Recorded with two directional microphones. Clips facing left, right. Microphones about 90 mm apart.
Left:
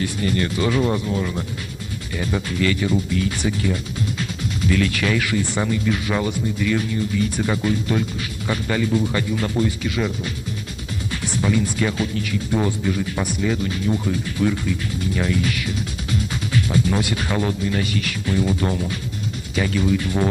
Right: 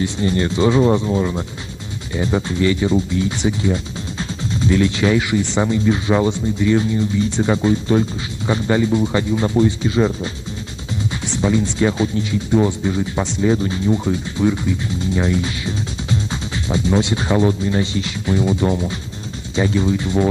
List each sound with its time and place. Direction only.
0.0 s speech: 25° right (ahead or behind)